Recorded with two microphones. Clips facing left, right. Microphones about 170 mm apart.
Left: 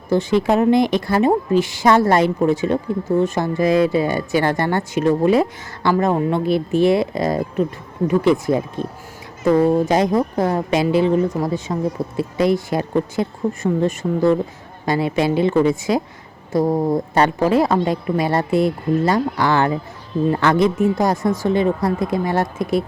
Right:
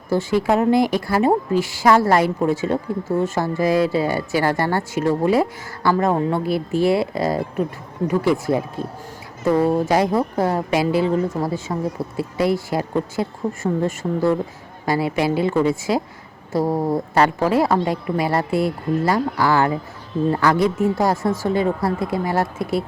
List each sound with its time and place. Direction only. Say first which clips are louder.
0.1 s a woman's voice: left 2 dB; 20° left (ahead or behind)
16.6 s a woman's voice: left 2 dB; 5° right (ahead or behind)
17.2 s a woman's voice: left 1 dB; 20° left (ahead or behind)